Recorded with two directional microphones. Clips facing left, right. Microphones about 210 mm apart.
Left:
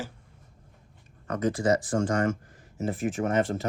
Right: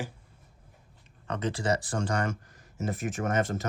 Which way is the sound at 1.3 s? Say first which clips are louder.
Left 4 dB; 30° right (ahead or behind).